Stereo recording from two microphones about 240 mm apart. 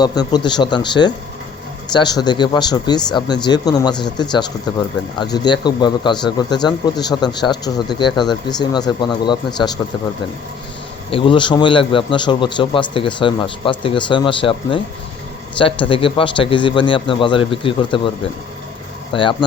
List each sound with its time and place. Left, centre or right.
0.0 s a man's voice: centre
11.1 s a man's voice: left
19.1 s a man's voice: centre